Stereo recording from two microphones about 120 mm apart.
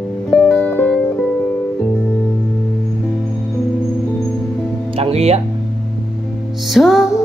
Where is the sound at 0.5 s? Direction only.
15° left (ahead or behind).